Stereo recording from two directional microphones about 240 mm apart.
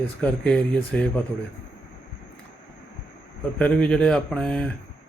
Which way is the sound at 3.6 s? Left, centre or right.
Centre.